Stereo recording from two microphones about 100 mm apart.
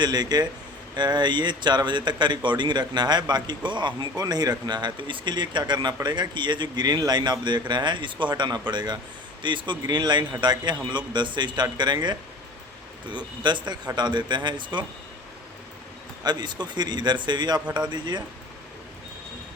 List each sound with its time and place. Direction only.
0.0 s speech: 45° right (ahead or behind)
16.2 s speech: 45° right (ahead or behind)
17.7 s speech: 10° right (ahead or behind)
17.9 s speech: 45° right (ahead or behind)